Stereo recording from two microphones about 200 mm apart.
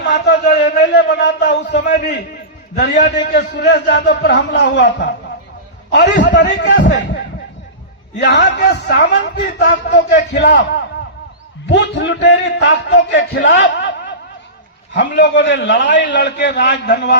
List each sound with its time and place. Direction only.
0.0 s a sound: 55° left (ahead or behind)
1.8 s a man's voice: 55° left (ahead or behind)
2.9 s a man's voice: 40° left (ahead or behind)
3.3 s a man's voice: 55° left (ahead or behind)
6.2 s a man's voice: 60° left (ahead or behind)
8.2 s a man's voice: 60° left (ahead or behind)